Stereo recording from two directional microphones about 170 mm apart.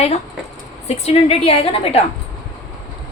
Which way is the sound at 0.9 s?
35° left (ahead or behind).